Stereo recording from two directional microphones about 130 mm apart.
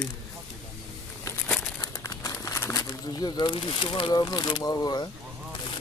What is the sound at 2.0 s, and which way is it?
Speech, 25° left (ahead or behind).